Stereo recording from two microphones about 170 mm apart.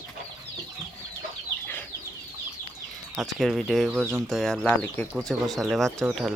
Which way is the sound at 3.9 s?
10° right (ahead or behind).